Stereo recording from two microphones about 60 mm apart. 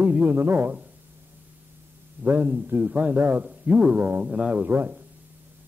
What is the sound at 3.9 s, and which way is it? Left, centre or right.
Speech, right.